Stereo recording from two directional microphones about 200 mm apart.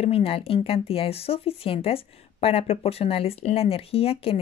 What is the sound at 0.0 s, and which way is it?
Speech, 30° left (ahead or behind).